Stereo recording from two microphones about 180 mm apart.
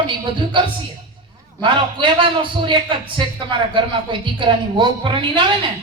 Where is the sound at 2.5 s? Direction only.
25° right (ahead or behind).